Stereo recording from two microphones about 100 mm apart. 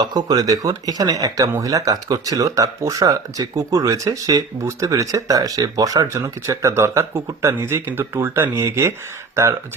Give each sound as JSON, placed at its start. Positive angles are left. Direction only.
{"t": 0.0, "sound": "speech", "side_deg": -40}